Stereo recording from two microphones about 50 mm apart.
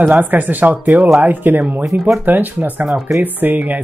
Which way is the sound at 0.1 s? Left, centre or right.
Right.